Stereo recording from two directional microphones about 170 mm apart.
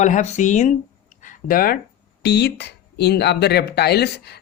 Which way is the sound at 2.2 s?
75° left (ahead or behind).